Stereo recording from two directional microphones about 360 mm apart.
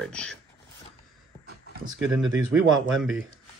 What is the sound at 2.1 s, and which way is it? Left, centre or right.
Speech, centre.